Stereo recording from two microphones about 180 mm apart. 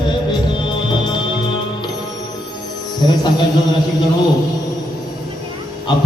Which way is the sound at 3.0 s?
25° left (ahead or behind).